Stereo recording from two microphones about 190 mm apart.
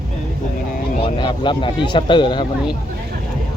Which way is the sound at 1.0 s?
25° left (ahead or behind).